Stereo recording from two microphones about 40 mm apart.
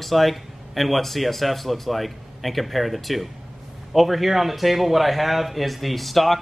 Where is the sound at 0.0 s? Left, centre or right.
Centre.